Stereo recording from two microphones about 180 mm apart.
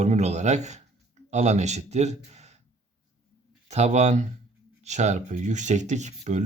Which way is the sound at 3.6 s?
40° right (ahead or behind).